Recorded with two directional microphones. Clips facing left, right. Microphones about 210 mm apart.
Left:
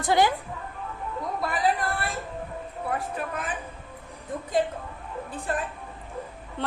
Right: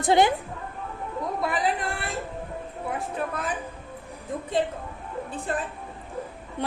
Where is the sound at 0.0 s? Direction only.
25° right (ahead or behind).